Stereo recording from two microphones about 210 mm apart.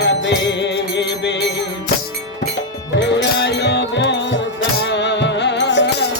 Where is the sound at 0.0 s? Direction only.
55° left (ahead or behind).